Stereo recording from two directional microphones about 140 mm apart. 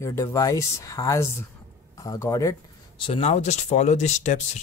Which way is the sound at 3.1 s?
50° left (ahead or behind).